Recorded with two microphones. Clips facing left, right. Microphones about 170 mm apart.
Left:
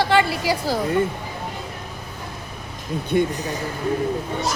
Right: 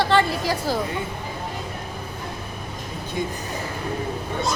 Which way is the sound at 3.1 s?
65° left (ahead or behind).